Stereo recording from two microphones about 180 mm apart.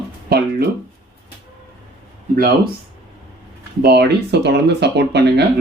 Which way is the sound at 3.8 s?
65° right (ahead or behind).